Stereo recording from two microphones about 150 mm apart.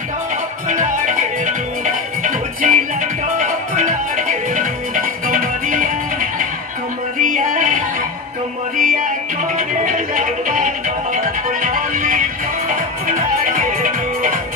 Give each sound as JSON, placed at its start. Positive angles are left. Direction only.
{"t": 0.7, "sound": "music", "side_deg": -60}